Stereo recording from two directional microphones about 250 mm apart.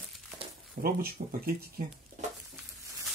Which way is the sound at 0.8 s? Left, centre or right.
Right.